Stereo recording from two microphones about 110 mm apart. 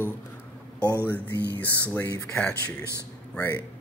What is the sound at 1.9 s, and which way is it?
Speech, 25° left (ahead or behind).